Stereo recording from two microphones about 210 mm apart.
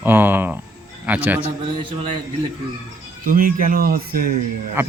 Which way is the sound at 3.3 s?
40° right (ahead or behind).